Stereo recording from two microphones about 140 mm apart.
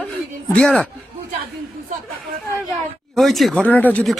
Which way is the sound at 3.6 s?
10° left (ahead or behind).